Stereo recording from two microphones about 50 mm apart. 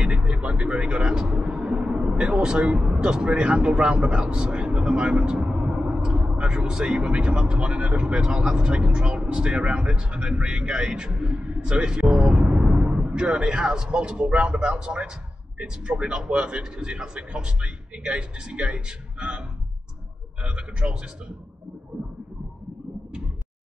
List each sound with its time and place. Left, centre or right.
0.0 s music: right
0.7 s speech: centre
20.4 s speech: right